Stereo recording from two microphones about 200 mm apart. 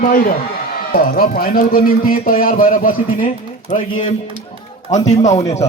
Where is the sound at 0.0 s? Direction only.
45° left (ahead or behind).